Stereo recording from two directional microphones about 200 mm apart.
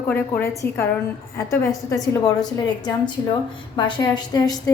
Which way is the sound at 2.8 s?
20° left (ahead or behind).